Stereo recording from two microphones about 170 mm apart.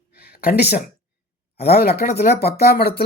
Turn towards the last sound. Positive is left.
turn(degrees=65)  # may be behind; listen again after turning